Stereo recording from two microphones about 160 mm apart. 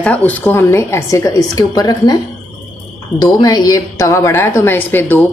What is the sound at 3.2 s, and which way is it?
A woman's voice, 25° left (ahead or behind).